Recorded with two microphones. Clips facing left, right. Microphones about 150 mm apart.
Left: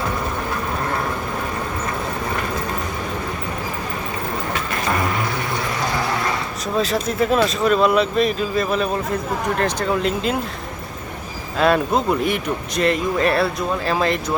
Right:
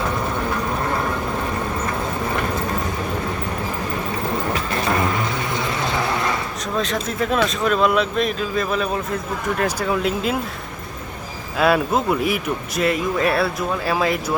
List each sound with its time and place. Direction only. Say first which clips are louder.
6.7 s speech: left 3 dB; 5° left (ahead or behind)
11.5 s speech: left 1 dB; 5° right (ahead or behind)